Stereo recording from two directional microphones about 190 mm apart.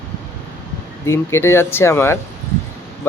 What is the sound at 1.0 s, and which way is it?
Speech, 15° left (ahead or behind).